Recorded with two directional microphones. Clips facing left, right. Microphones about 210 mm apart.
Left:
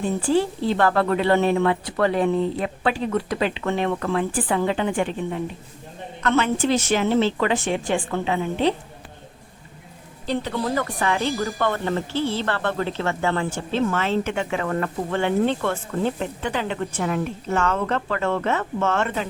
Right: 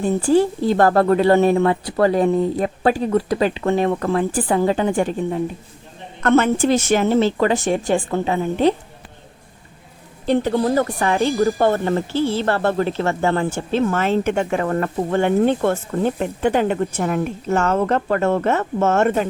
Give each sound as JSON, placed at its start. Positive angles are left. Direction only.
{"t": 0.0, "sound": "a woman's voice", "side_deg": -45}
{"t": 10.2, "sound": "a woman's voice", "side_deg": -45}